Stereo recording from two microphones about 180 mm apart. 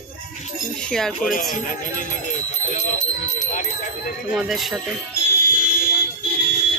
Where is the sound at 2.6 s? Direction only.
40° left (ahead or behind).